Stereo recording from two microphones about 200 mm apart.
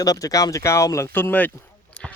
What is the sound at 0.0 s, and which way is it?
Speech, 15° left (ahead or behind).